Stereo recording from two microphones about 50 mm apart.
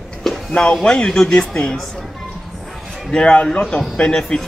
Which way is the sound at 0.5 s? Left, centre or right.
Centre.